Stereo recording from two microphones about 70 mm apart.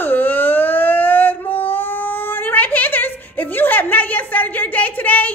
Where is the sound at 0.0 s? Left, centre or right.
Left.